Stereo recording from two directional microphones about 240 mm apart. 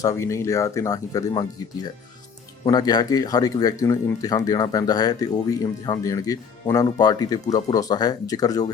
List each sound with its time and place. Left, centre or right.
0.0 s speech: centre